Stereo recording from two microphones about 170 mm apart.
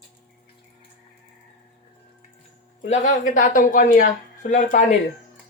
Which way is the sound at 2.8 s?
45° left (ahead or behind).